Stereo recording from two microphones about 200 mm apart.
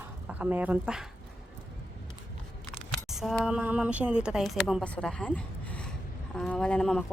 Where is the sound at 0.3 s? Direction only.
5° right (ahead or behind).